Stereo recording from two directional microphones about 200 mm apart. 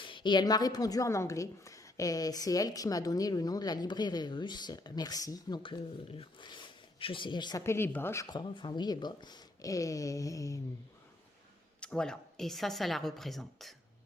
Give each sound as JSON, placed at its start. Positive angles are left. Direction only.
{"t": 0.0, "sound": "a woman's voice", "side_deg": 25}
{"t": 11.8, "sound": "a woman's voice", "side_deg": 5}